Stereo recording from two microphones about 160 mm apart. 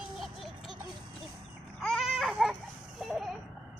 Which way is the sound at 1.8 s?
Centre (ahead or behind).